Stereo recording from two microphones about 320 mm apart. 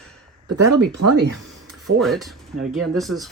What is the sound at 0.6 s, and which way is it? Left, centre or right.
Speech, right.